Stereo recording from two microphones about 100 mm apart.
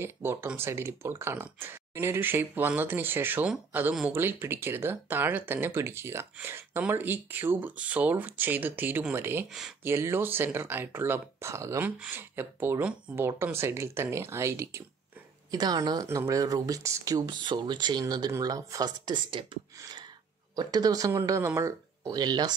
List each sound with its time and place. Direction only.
0.0 s speech: 25° right (ahead or behind)
9.5 s speech: 5° right (ahead or behind)
9.8 s speech: 25° right (ahead or behind)
11.8 s speech: 20° right (ahead or behind)
13.1 s speech: 10° right (ahead or behind)
13.4 s speech: 25° right (ahead or behind)
15.5 s speech: 40° right (ahead or behind)
17.4 s speech: 50° right (ahead or behind)
20.5 s speech: 40° right (ahead or behind)